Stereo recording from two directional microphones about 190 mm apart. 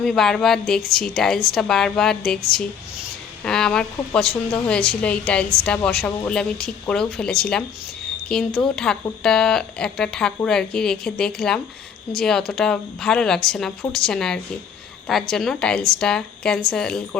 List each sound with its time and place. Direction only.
0.0 s a woman's voice: centre (ahead or behind)
3.4 s a woman's voice: 5° left (ahead or behind)